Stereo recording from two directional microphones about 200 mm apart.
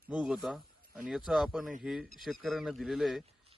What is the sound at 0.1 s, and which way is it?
A man's voice, 5° right (ahead or behind).